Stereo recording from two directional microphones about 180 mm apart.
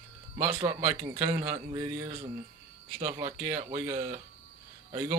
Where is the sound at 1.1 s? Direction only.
35° right (ahead or behind).